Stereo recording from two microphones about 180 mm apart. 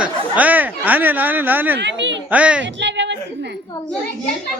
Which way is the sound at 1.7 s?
80° right.